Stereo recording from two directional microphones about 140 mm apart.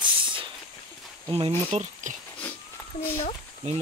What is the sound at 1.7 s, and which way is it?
Speech, 60° right (ahead or behind).